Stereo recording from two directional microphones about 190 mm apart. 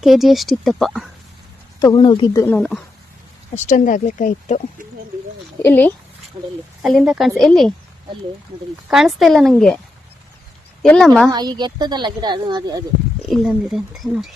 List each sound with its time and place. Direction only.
0.0 s speech: centre (ahead or behind)
1.8 s speech: 20° left (ahead or behind)
2.6 s speech: 5° left (ahead or behind)
3.5 s speech: 40° left (ahead or behind)
5.6 s speech: 10° left (ahead or behind)
6.3 s speech: 25° right (ahead or behind)
6.8 s speech: centre (ahead or behind)
8.9 s speech: centre (ahead or behind)
10.8 s speech: 5° left (ahead or behind)
11.3 s speech: 20° right (ahead or behind)
13.2 s speech: centre (ahead or behind)